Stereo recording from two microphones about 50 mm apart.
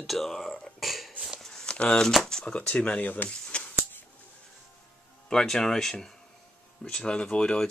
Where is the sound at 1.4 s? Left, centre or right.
Centre.